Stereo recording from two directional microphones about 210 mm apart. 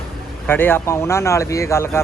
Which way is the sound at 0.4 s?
10° left (ahead or behind).